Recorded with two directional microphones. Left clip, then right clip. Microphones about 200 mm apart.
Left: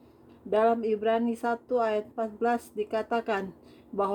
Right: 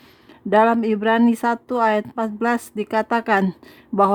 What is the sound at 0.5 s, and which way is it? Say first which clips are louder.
Speech: right 8 dB; 40° right (ahead or behind).